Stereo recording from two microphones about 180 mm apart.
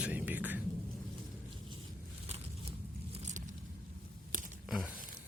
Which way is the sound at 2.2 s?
35° right (ahead or behind).